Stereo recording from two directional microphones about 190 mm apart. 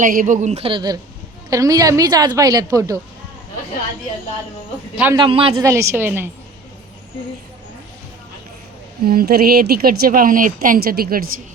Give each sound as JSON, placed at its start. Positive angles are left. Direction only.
{"t": 0.0, "sound": "a woman's voice", "side_deg": -45}
{"t": 5.1, "sound": "a woman's voice", "side_deg": -25}
{"t": 5.6, "sound": "a woman's voice", "side_deg": -15}
{"t": 9.0, "sound": "a woman's voice", "side_deg": -55}